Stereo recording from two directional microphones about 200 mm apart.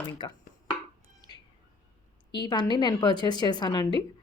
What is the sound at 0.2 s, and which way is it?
Speech, 25° left (ahead or behind).